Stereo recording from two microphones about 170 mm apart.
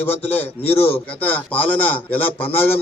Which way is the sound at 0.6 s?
35° left (ahead or behind).